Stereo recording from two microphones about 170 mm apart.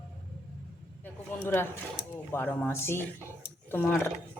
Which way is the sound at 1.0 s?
10° left (ahead or behind).